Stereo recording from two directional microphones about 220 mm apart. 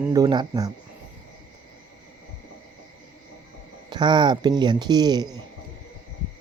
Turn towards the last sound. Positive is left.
turn(degrees=-20)  # may be behind; listen again after turning